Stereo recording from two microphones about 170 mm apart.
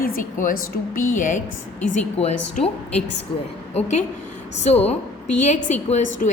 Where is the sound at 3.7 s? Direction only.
45° left (ahead or behind).